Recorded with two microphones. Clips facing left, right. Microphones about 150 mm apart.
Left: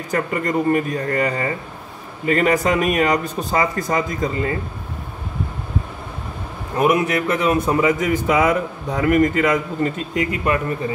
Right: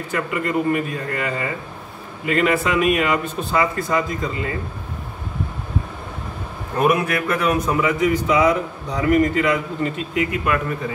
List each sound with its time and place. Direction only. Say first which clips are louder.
0.1 s speech: left 2 dB; 40° left (ahead or behind)
6.8 s a man's voice: left 1 dB; 20° left (ahead or behind)
7.8 s a man's voice: left 1 dB; 45° left (ahead or behind)